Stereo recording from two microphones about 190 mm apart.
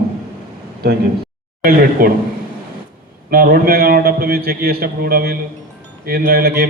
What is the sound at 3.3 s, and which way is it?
A man's voice, 50° right (ahead or behind).